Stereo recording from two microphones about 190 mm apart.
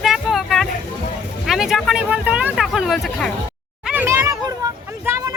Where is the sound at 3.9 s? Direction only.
10° right (ahead or behind).